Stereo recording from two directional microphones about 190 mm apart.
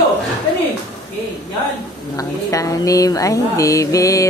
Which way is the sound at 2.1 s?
15° left (ahead or behind).